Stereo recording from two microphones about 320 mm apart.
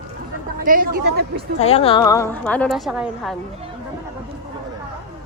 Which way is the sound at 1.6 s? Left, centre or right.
Centre.